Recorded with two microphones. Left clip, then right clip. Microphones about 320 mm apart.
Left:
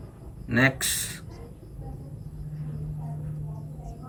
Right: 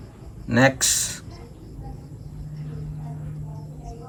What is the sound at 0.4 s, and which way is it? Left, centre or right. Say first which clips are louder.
Speech: right 5 dB; centre.